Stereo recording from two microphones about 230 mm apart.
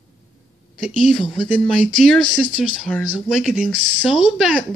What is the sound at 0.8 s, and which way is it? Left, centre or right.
Speech, centre.